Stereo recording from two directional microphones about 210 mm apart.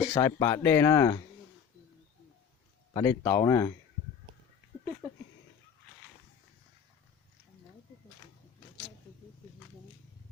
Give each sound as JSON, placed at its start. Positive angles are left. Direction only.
{"t": 0.1, "sound": "speech", "side_deg": 15}
{"t": 2.9, "sound": "speech", "side_deg": 15}